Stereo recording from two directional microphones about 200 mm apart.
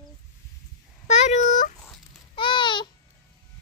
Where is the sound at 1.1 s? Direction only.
35° left (ahead or behind).